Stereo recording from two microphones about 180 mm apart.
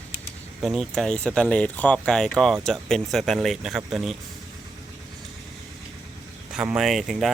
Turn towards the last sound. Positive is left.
turn(degrees=0)  # may be behind; listen again after turning